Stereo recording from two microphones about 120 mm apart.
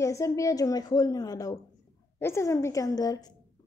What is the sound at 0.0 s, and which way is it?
A woman's voice, 25° left (ahead or behind).